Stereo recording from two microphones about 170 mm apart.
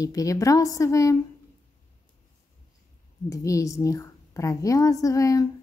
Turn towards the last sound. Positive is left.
turn(degrees=20)  # may be behind; listen again after turning